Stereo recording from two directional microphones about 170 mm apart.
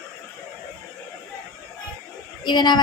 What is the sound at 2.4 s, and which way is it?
Speech, 25° left (ahead or behind).